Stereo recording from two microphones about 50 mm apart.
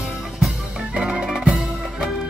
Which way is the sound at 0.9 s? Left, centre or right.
Centre.